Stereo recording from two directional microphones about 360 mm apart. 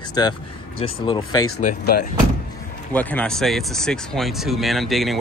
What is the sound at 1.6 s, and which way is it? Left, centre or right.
Speech, left.